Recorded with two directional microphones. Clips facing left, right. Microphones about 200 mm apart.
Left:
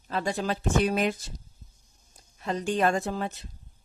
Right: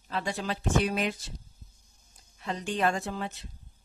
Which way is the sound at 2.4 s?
45° left (ahead or behind).